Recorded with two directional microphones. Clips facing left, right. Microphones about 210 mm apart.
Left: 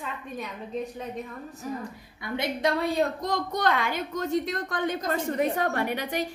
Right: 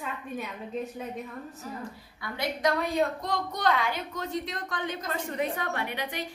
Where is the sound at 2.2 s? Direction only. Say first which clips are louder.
Left 3 dB; 25° left (ahead or behind).